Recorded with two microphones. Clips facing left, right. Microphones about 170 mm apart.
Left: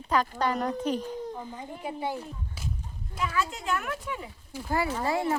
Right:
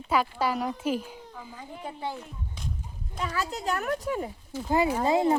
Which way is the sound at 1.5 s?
10° left (ahead or behind).